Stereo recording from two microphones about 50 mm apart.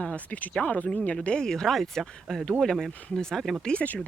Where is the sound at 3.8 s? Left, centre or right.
Left.